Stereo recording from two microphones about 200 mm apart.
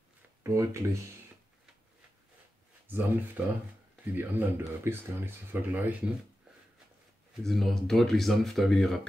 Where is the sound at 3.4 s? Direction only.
5° right (ahead or behind).